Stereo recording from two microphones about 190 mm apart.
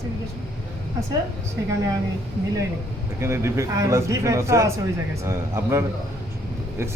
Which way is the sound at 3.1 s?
15° right (ahead or behind).